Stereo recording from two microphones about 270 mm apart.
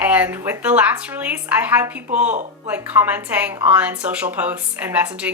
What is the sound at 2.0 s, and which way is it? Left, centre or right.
Speech, right.